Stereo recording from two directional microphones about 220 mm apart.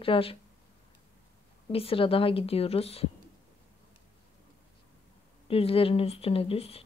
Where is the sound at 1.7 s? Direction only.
25° left (ahead or behind).